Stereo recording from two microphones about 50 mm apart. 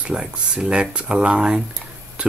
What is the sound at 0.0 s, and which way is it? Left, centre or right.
Speech, centre.